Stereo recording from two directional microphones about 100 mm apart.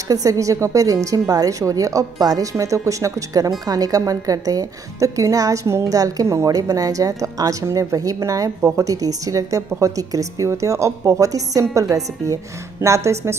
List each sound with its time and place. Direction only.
0.1 s a woman's voice: 35° right (ahead or behind)